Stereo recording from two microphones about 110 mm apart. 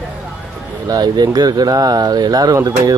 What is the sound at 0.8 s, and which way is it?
Speech, 35° right (ahead or behind).